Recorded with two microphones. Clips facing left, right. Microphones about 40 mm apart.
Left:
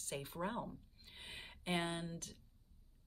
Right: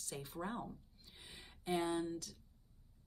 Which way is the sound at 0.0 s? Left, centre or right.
Left.